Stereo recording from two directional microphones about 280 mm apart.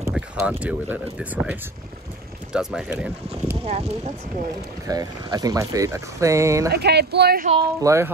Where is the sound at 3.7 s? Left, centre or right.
Right.